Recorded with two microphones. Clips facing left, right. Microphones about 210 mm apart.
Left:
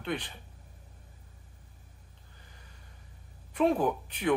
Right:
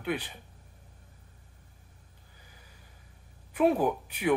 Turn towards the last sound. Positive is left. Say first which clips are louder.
# right 1 dB
turn(degrees=-10)  # may be behind; listen again after turning